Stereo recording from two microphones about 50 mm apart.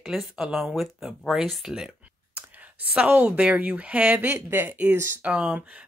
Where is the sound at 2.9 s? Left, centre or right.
Right.